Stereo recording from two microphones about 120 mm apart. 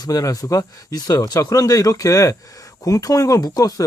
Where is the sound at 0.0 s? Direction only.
30° left (ahead or behind).